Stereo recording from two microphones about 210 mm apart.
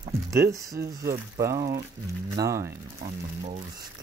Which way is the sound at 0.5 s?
15° right (ahead or behind).